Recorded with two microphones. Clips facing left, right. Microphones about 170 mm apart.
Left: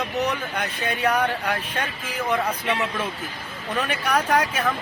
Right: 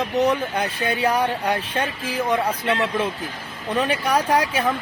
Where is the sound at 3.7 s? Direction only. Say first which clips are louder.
Right 3 dB; 30° right (ahead or behind).